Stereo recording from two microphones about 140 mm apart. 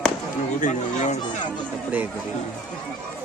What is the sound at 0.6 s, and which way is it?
Speech, 60° left (ahead or behind).